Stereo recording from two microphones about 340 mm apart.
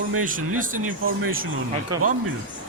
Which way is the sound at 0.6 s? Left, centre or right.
Right.